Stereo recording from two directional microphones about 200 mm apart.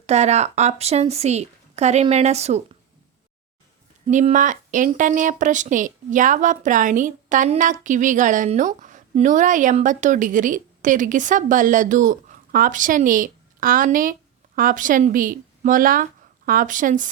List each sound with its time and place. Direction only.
0.0 s speech: 35° right (ahead or behind)
4.0 s speech: 35° right (ahead or behind)